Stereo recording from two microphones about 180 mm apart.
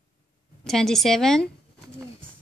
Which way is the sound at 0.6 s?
Centre (ahead or behind).